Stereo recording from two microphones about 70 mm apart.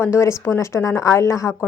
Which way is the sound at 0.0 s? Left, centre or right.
Left.